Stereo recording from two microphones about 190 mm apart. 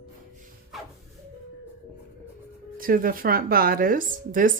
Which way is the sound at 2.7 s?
50° right (ahead or behind).